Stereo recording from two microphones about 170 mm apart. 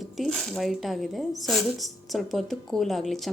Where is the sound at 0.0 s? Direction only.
Centre (ahead or behind).